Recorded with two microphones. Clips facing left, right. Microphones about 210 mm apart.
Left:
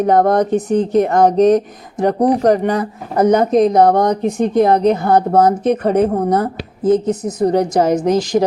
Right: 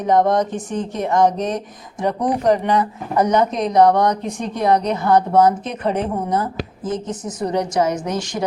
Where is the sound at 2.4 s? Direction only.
45° left (ahead or behind).